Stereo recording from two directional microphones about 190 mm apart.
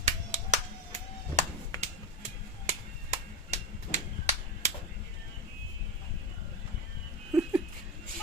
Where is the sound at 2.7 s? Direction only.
35° right (ahead or behind).